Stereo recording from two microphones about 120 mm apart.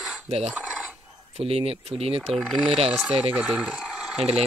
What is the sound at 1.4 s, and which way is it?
Speech, 55° right (ahead or behind).